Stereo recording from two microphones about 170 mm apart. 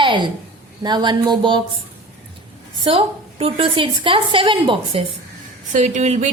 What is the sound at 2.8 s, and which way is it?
A woman's voice, 30° right (ahead or behind).